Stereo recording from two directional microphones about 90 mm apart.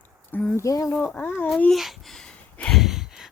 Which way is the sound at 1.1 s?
20° left (ahead or behind).